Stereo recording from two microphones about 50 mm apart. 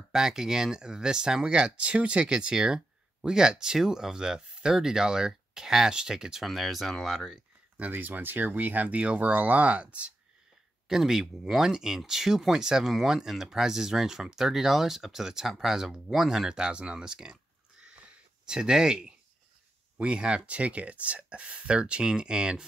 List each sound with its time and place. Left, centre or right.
0.1 s speech: centre
7.9 s speech: right
10.9 s speech: centre